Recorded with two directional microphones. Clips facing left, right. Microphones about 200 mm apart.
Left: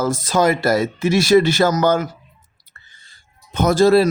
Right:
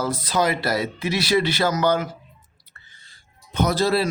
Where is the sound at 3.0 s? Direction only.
50° left (ahead or behind).